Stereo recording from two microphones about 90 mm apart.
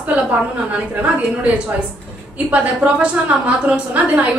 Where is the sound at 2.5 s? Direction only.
15° right (ahead or behind).